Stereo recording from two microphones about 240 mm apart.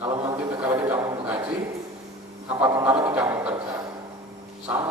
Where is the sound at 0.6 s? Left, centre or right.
Centre.